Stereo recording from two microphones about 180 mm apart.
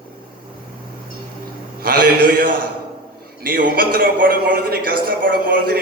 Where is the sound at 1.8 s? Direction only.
55° right (ahead or behind).